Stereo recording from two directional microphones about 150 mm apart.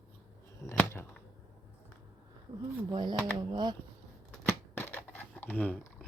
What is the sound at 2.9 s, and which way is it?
Speech, 30° right (ahead or behind).